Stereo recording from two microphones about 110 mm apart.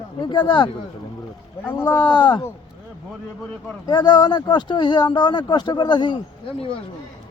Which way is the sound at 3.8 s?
40° left (ahead or behind).